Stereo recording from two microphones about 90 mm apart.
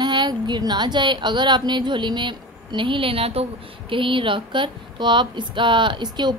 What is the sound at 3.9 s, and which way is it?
A woman's voice, 70° right (ahead or behind).